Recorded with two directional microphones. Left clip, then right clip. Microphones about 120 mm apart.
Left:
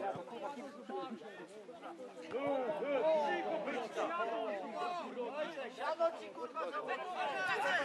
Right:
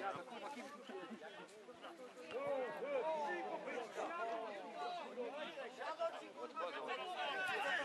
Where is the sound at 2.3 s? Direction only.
35° left (ahead or behind).